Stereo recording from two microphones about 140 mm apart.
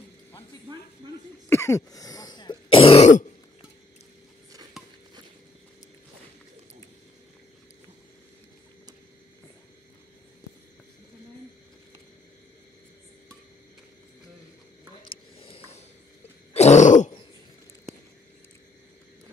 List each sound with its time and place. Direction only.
1.5 s throat clearing: 20° left (ahead or behind); by 3.1 s 40° left (ahead or behind)
15.0 s a sound: 40° left (ahead or behind)
16.5 s throat clearing: 55° left (ahead or behind)